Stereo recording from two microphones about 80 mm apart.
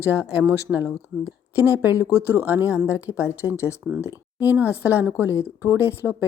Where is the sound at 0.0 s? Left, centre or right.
Right.